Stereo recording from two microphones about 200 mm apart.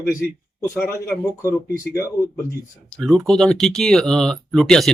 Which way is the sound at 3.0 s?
Centre (ahead or behind).